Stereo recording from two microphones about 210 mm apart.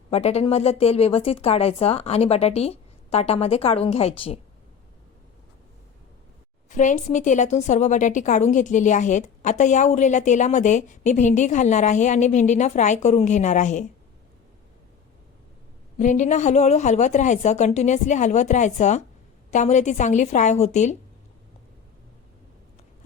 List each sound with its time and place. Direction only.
0.1 s speech: 30° left (ahead or behind)
6.7 s a woman's voice: 35° left (ahead or behind)
16.0 s a woman's voice: 35° left (ahead or behind)